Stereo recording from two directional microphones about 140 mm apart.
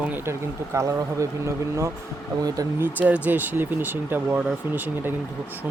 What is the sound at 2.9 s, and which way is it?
Speech, 10° right (ahead or behind).